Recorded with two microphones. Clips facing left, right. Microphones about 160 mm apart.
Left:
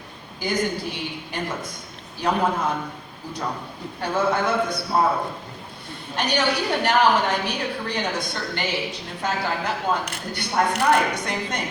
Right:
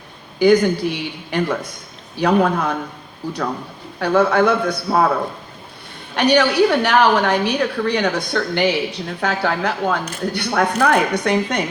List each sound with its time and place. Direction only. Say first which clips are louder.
0.3 s a woman's voice: right 11 dB; 70° right (ahead or behind)
4.0 s a woman's voice: right 7 dB; 70° right (ahead or behind)
6.1 s a woman's voice: right 9 dB; 70° right (ahead or behind)